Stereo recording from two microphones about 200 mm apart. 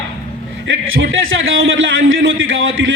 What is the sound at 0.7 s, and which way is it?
A man's voice, 75° right (ahead or behind).